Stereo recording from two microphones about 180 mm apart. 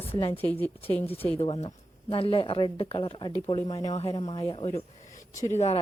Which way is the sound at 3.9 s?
35° left (ahead or behind).